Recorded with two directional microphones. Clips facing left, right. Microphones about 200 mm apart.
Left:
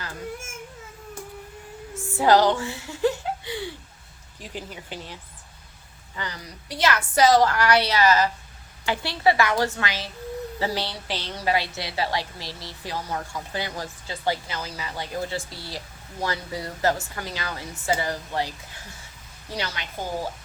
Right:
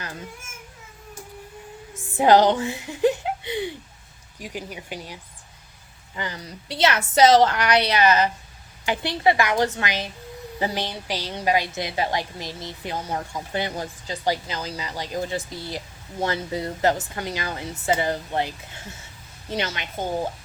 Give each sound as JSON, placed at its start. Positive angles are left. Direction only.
{"t": 2.1, "sound": "a woman's voice", "side_deg": -20}